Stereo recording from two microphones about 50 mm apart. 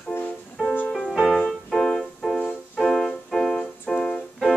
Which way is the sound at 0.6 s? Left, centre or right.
Centre.